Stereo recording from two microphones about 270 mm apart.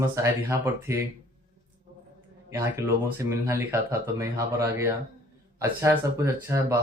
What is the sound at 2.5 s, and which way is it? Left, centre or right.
Speech, centre.